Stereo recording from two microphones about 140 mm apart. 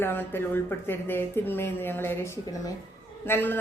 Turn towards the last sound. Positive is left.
turn(degrees=15)  # may be behind; listen again after turning